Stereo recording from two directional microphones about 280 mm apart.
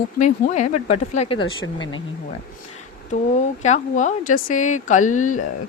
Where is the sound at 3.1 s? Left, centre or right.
Left.